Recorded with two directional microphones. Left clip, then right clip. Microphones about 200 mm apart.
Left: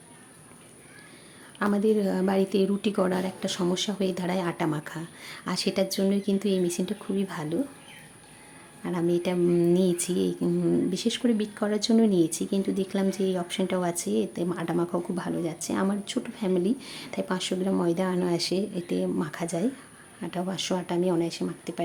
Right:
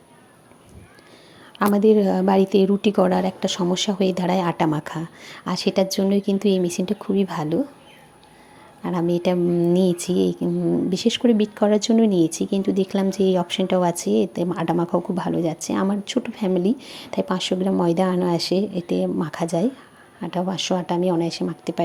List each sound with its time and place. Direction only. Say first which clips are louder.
1.5 s speech: right 8 dB; 20° right (ahead or behind)
8.8 s speech: right 5 dB; 20° right (ahead or behind)
9.5 s speech: right 3 dB; 5° right (ahead or behind)
9.7 s speech: right 5 dB; 15° right (ahead or behind)